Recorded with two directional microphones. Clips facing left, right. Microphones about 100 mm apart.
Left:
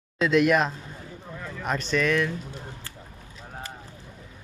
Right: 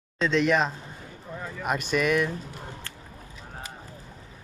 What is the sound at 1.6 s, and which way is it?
Speech, 10° right (ahead or behind).